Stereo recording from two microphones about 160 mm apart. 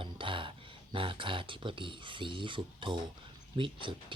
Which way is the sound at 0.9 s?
35° right (ahead or behind).